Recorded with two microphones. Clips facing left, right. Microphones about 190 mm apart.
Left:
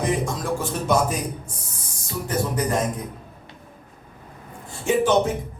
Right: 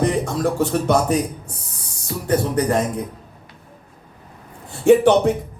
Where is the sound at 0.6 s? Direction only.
65° right (ahead or behind).